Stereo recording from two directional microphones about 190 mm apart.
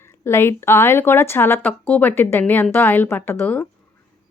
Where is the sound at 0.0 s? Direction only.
15° left (ahead or behind).